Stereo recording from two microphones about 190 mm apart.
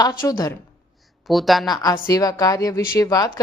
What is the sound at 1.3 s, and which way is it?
Speech, centre (ahead or behind).